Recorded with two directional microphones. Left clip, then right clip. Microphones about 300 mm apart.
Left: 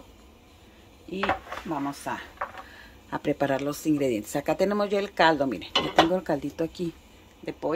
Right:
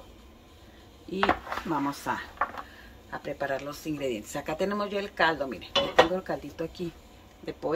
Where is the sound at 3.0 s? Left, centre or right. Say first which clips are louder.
Left 5 dB; left.